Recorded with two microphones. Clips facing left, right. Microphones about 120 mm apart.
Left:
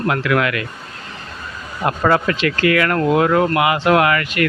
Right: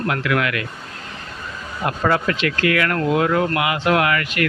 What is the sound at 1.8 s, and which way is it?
Speech, 60° left (ahead or behind).